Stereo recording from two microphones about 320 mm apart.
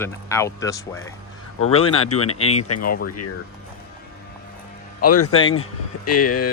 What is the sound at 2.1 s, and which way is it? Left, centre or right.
Speech, left.